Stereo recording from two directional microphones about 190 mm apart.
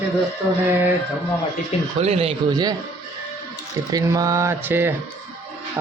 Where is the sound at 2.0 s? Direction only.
35° right (ahead or behind).